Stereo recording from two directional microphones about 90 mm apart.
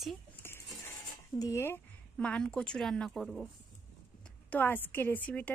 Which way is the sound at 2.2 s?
10° left (ahead or behind).